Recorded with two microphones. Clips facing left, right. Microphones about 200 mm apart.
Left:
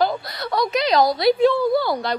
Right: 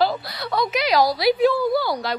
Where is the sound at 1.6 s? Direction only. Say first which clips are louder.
Left 2 dB; 25° left (ahead or behind).